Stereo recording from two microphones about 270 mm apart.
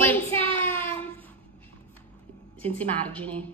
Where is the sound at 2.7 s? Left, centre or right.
Centre.